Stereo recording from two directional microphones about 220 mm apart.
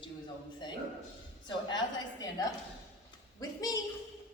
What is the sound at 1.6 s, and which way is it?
A woman's voice, 20° left (ahead or behind).